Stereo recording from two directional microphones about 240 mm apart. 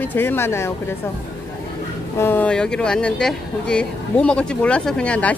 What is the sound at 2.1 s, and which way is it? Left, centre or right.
Speech, centre.